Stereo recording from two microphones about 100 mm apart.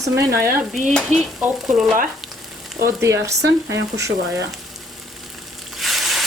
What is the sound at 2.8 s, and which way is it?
Speech, 30° right (ahead or behind).